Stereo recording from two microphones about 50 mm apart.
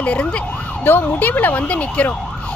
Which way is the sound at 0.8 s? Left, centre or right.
Left.